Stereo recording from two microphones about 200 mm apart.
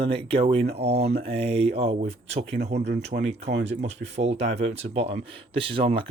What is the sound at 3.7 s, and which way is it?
Speech, 35° right (ahead or behind).